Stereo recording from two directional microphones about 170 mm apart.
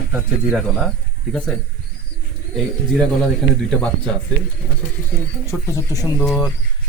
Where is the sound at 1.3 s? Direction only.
5° left (ahead or behind).